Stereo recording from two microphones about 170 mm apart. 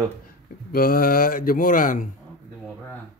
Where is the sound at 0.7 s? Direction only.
60° left (ahead or behind).